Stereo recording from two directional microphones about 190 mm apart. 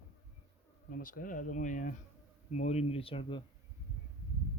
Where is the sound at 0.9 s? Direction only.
50° left (ahead or behind); by 3.4 s 25° left (ahead or behind).